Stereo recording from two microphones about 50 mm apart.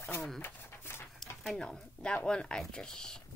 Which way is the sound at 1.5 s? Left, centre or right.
Centre.